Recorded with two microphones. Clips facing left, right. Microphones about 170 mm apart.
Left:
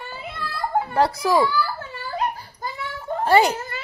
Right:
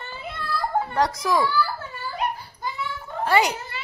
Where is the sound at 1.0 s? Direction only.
30° left (ahead or behind).